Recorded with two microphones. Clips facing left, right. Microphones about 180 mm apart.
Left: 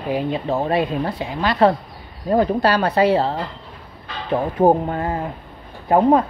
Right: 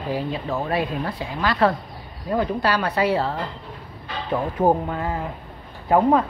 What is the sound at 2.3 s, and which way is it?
Speech, 35° left (ahead or behind).